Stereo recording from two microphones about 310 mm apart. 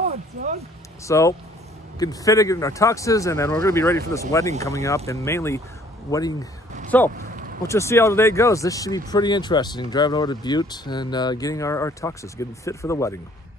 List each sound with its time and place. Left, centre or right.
1.0 s speech: centre
7.2 s a sound: right
7.6 s speech: centre